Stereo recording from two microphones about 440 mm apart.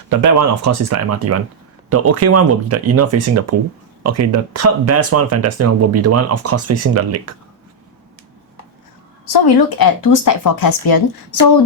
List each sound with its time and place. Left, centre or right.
0.1 s speech: right
9.3 s speech: left